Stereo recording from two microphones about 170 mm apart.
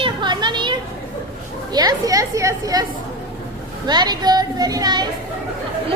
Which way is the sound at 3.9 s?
25° right (ahead or behind).